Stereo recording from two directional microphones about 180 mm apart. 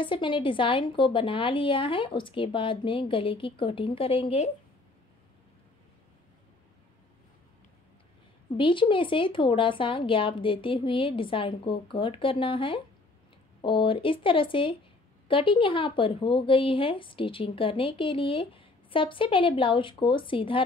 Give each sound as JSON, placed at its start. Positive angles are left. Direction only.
{"t": 0.0, "sound": "speech", "side_deg": 25}
{"t": 8.5, "sound": "speech", "side_deg": 30}